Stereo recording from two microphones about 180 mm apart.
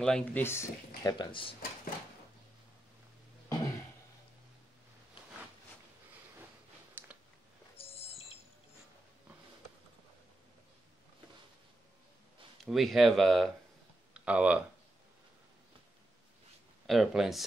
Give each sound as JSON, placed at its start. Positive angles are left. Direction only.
{"t": 0.0, "sound": "speech", "side_deg": 5}
{"t": 1.1, "sound": "speech", "side_deg": 25}
{"t": 3.4, "sound": "cough", "side_deg": 20}
{"t": 7.0, "sound": "a sound", "side_deg": -10}
{"t": 7.7, "sound": "a sound", "side_deg": 30}
{"t": 12.6, "sound": "speech", "side_deg": 0}
{"t": 16.8, "sound": "speech", "side_deg": 0}